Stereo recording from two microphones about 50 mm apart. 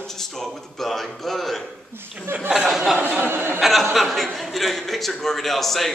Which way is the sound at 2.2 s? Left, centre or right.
Right.